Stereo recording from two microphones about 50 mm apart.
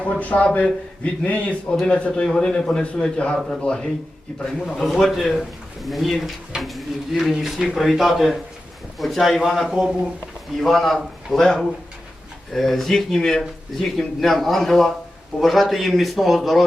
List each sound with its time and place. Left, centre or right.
0.0 s a man's voice: left
2.3 s a man's voice: centre
4.7 s speech: centre
10.6 s speech: centre
12.5 s speech: centre